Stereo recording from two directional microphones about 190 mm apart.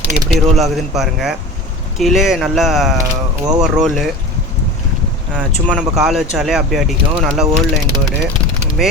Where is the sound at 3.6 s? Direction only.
Centre (ahead or behind).